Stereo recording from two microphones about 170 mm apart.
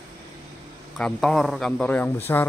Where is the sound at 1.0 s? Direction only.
5° left (ahead or behind).